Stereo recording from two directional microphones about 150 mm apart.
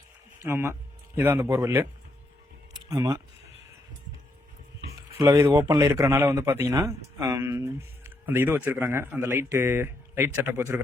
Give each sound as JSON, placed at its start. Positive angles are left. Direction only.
{"t": 0.4, "sound": "speech", "side_deg": -15}
{"t": 2.9, "sound": "speech", "side_deg": -25}
{"t": 5.1, "sound": "a man's voice", "side_deg": -20}